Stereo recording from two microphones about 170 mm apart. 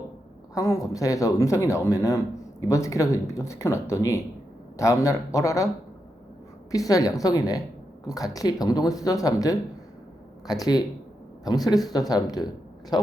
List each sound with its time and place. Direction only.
0.5 s speech: 20° left (ahead or behind)
6.7 s speech: 20° left (ahead or behind)